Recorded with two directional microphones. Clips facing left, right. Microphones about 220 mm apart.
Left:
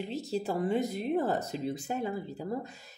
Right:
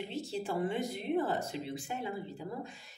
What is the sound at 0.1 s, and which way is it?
Speech, 40° left (ahead or behind).